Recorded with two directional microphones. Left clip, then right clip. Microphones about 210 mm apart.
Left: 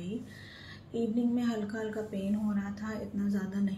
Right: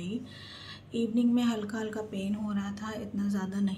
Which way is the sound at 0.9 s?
15° right (ahead or behind).